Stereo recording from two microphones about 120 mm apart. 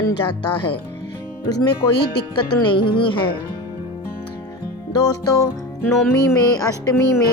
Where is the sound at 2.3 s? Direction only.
40° left (ahead or behind).